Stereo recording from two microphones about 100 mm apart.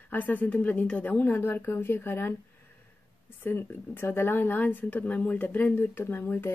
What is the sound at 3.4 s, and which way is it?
Speech, 20° left (ahead or behind).